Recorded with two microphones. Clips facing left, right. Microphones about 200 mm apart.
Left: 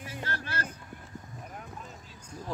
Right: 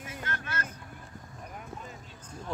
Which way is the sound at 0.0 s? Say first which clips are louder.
Left 1 dB; 30° left (ahead or behind).